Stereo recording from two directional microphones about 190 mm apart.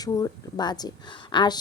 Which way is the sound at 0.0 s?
20° left (ahead or behind).